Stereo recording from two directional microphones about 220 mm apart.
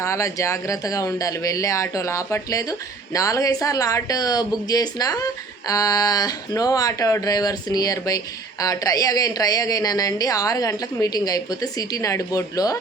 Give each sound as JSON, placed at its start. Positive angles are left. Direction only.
{"t": 0.0, "sound": "speech", "side_deg": 15}